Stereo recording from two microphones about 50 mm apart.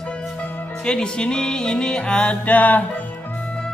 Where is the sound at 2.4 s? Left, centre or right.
Left.